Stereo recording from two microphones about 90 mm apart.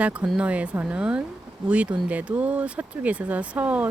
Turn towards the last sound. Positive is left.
turn(degrees=-15)  # may be behind; listen again after turning